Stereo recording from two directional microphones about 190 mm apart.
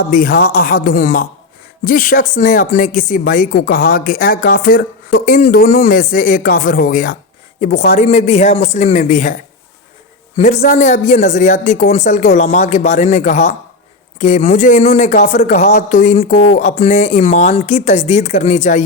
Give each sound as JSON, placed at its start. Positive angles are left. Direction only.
{"t": 0.1, "sound": "speech", "side_deg": 50}
{"t": 10.3, "sound": "speech", "side_deg": 35}